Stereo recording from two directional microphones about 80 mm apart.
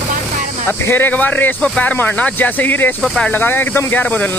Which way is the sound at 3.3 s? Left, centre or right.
Left.